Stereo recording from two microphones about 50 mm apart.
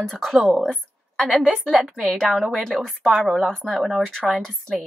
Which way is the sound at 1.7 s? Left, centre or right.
Centre.